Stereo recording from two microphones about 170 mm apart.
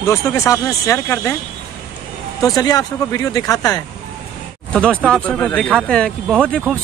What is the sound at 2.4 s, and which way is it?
Speech, 20° left (ahead or behind).